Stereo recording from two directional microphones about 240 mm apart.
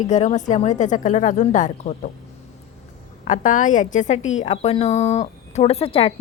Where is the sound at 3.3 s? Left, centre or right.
Left.